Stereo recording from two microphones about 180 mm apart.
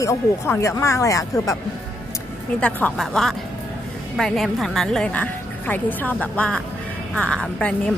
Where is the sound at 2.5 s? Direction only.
5° left (ahead or behind).